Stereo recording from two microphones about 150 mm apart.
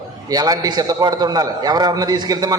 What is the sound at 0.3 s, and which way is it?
A man's voice, 25° right (ahead or behind).